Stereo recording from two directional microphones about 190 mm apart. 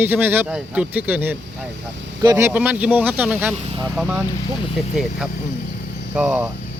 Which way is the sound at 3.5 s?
30° right (ahead or behind).